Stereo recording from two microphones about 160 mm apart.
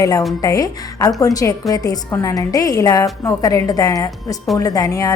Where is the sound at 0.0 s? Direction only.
20° left (ahead or behind).